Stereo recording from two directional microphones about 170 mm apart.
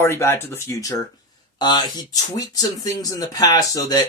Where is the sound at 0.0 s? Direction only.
15° left (ahead or behind).